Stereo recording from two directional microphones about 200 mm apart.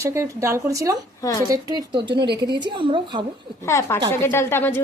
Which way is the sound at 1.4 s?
20° right (ahead or behind).